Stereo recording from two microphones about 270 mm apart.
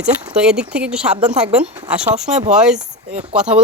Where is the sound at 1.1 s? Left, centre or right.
Right.